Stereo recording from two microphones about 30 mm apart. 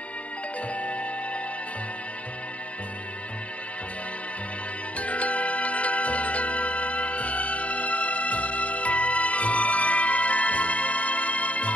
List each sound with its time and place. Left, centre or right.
0.7 s music: left
4.9 s music: left